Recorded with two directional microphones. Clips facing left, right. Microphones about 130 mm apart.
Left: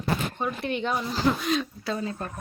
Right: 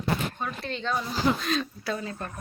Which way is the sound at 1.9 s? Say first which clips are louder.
Left 5 dB; 30° left (ahead or behind).